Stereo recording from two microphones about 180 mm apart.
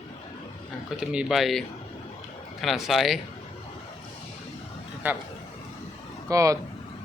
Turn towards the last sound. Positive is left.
turn(degrees=-20)  # may be behind; listen again after turning